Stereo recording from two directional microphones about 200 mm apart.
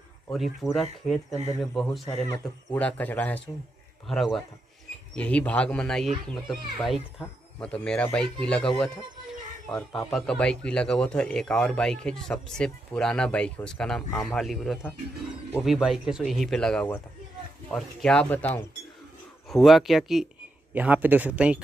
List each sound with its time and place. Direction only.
0.3 s a man's voice: centre (ahead or behind)